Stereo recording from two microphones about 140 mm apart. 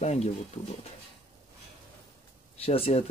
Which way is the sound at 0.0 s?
50° left (ahead or behind).